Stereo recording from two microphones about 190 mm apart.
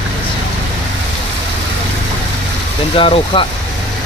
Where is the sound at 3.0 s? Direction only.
25° left (ahead or behind).